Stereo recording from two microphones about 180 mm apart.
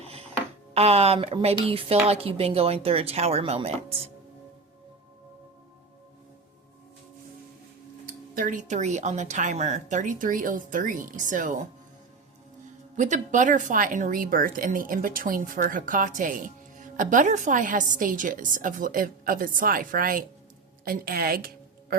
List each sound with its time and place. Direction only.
0.0 s music: 35° right (ahead or behind)
0.7 s a woman's voice: 35° right (ahead or behind)
8.4 s speech: 45° right (ahead or behind)
13.0 s a woman's voice: 45° right (ahead or behind)